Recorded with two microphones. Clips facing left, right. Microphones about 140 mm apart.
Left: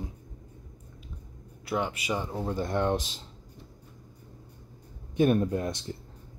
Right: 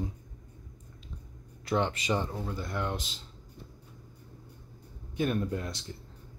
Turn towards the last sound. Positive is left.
turn(degrees=20)  # may be behind; listen again after turning